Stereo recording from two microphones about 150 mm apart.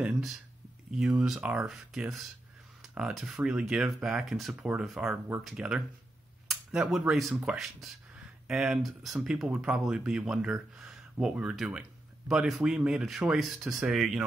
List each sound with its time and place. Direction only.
0.9 s speech: 5° right (ahead or behind)